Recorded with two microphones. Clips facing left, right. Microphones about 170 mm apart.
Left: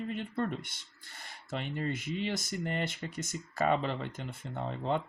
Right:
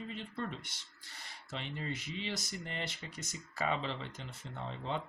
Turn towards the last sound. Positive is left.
turn(degrees=50)  # may be behind; listen again after turning